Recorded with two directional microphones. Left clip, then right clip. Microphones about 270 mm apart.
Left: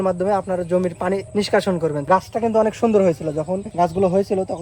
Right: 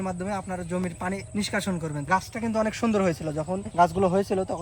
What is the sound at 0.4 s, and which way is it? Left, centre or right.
A man's voice, left.